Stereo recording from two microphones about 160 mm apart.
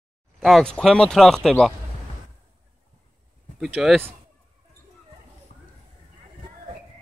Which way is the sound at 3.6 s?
Centre (ahead or behind).